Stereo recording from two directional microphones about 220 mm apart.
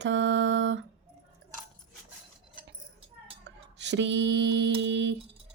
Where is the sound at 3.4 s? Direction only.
55° right (ahead or behind).